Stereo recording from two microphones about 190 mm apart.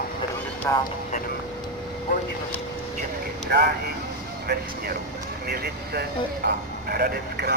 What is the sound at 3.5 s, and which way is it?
Speech, 55° right (ahead or behind).